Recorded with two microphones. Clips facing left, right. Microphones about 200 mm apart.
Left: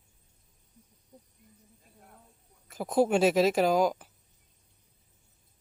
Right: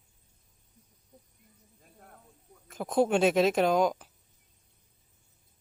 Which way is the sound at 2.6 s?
5° left (ahead or behind).